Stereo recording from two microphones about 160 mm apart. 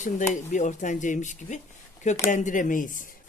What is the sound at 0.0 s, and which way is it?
Speech, 50° left (ahead or behind).